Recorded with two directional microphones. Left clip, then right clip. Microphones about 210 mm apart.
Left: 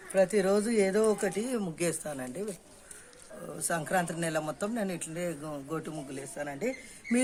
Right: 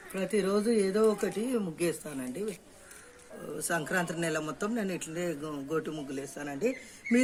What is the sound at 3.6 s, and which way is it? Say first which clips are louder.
A man's voice: left 1 dB; 30° left (ahead or behind).